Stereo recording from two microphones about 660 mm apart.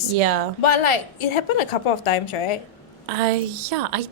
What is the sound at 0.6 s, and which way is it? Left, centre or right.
A woman's voice, left.